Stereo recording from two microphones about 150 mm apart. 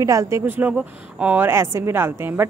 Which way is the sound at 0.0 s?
20° right (ahead or behind).